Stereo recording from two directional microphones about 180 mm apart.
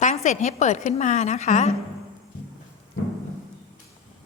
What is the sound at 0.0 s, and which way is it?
A woman's voice, 40° left (ahead or behind).